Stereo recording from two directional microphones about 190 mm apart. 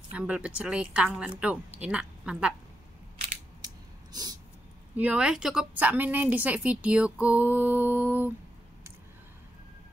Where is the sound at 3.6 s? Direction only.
20° right (ahead or behind).